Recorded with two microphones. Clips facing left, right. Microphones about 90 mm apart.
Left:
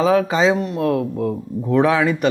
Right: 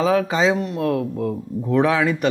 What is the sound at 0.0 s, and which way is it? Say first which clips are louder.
Speech: left 2 dB; 20° left (ahead or behind).